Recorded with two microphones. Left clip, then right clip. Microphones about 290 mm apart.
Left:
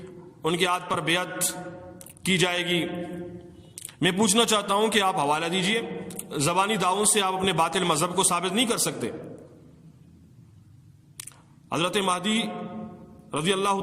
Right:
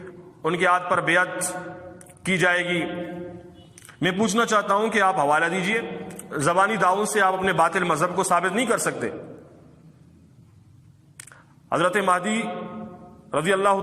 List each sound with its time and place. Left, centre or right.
0.4 s a man's voice: centre
3.8 s a sound: centre
4.4 s a man's voice: centre
11.7 s a man's voice: centre